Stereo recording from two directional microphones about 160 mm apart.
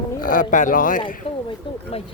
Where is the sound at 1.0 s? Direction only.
30° left (ahead or behind).